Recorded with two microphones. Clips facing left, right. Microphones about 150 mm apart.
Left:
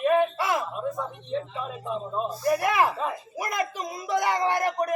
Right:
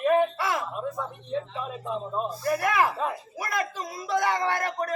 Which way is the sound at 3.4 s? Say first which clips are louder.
Left 2 dB; 20° left (ahead or behind).